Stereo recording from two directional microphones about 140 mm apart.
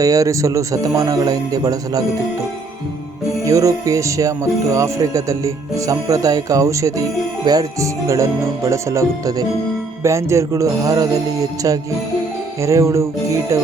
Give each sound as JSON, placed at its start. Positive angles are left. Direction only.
{"t": 0.0, "sound": "speech", "side_deg": -25}
{"t": 3.4, "sound": "speech", "side_deg": -25}
{"t": 12.6, "sound": "speech", "side_deg": -20}